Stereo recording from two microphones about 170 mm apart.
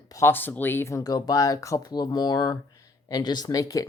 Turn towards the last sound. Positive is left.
turn(degrees=20)  # may be behind; listen again after turning